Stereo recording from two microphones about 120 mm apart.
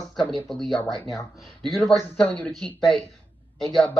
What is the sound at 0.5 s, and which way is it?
Speech, 5° left (ahead or behind).